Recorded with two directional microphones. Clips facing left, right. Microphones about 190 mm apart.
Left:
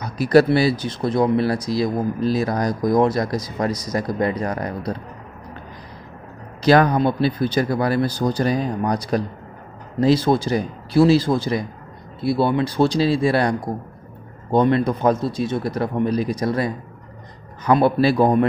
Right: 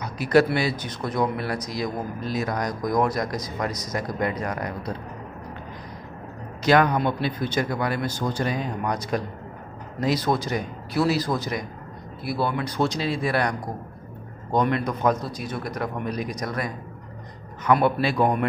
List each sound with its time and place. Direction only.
0.0 s speech: 35° left (ahead or behind)
6.6 s speech: 35° left (ahead or behind)